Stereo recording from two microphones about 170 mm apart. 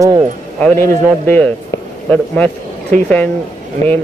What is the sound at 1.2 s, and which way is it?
Speech, 10° left (ahead or behind).